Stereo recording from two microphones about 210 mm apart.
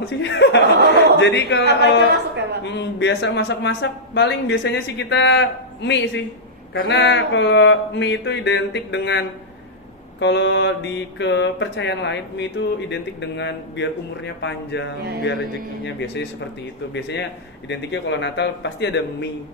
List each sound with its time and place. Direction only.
0.2 s speech: 55° left (ahead or behind)
0.7 s chuckle: 50° right (ahead or behind)
1.2 s mantra: 55° left (ahead or behind)
10.2 s mantra: 60° left (ahead or behind)